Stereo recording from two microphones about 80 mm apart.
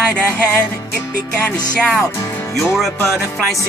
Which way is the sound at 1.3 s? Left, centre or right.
Centre.